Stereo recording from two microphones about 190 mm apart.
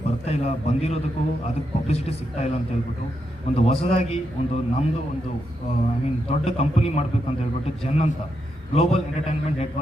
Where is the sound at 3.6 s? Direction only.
35° left (ahead or behind).